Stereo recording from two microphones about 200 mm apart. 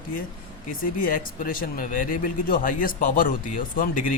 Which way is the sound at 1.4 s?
45° left (ahead or behind).